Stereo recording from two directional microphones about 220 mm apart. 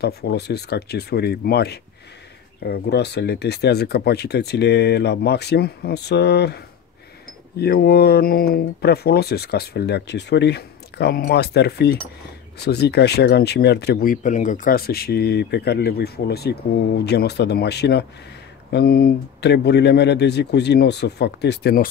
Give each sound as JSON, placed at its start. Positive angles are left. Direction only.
{"t": 0.0, "sound": "speech", "side_deg": 45}